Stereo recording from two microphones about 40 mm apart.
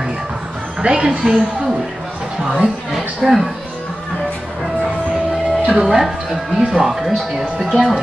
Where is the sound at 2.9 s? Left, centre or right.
Centre.